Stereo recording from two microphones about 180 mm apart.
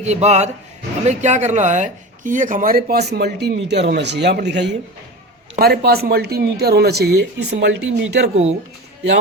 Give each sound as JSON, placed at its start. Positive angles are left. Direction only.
{"t": 0.0, "sound": "speech", "side_deg": -40}
{"t": 3.1, "sound": "speech", "side_deg": -65}
{"t": 5.5, "sound": "speech", "side_deg": -60}
{"t": 7.6, "sound": "speech", "side_deg": -80}